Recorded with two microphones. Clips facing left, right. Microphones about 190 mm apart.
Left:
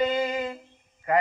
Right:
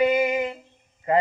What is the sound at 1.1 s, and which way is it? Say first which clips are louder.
Speech: right 2 dB; 25° right (ahead or behind).